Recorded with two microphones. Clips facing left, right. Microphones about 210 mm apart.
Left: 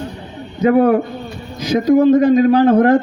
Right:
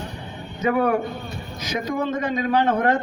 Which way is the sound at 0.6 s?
30° left (ahead or behind).